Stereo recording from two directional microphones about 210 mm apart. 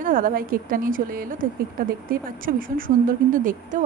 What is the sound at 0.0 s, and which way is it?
A woman's voice, 40° right (ahead or behind).